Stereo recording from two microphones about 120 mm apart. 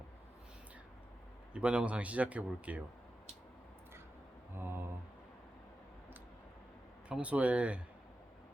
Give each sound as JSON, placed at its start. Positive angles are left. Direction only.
{"t": 1.5, "sound": "speech", "side_deg": -10}
{"t": 4.6, "sound": "mantra", "side_deg": -15}
{"t": 7.1, "sound": "speech", "side_deg": -10}